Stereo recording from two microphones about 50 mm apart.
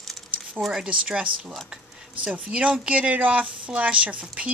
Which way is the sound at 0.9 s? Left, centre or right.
Centre.